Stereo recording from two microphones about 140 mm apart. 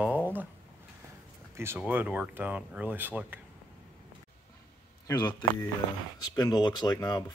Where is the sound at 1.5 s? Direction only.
20° right (ahead or behind).